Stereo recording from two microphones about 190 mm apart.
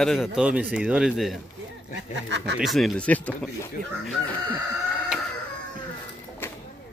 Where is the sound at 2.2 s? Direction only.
65° right (ahead or behind).